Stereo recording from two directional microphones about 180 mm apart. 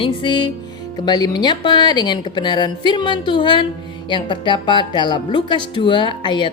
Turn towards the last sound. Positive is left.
turn(degrees=25)  # may be behind; listen again after turning